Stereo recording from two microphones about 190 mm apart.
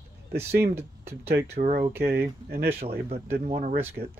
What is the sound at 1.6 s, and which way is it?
Speech, 55° right (ahead or behind).